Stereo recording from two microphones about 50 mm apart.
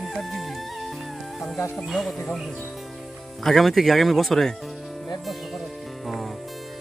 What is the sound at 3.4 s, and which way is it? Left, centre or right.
Speech, centre.